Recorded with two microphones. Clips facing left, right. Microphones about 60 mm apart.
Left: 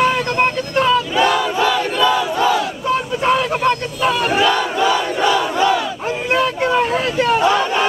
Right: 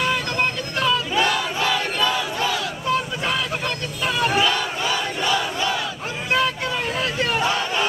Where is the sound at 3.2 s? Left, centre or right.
Left.